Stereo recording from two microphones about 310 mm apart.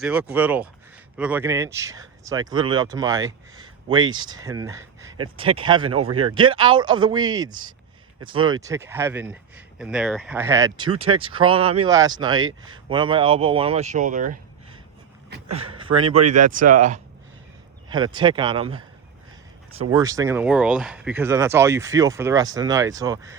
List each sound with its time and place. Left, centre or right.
0.0 s speech: centre
12.5 s speech: right
12.9 s speech: centre
15.5 s speech: centre
16.2 s speech: right
17.8 s speech: centre
19.9 s speech: centre